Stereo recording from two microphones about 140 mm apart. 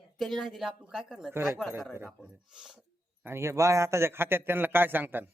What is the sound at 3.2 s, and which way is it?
A man's voice, 20° right (ahead or behind).